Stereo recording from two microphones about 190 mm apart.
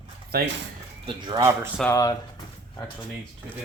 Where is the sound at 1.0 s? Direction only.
25° right (ahead or behind).